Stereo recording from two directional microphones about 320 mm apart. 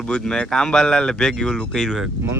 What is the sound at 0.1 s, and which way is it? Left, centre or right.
Speech, centre.